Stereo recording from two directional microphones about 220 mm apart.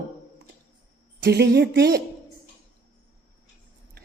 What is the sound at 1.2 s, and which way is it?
Speech, 50° right (ahead or behind).